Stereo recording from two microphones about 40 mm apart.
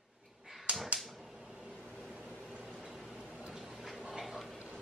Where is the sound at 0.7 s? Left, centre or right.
Right.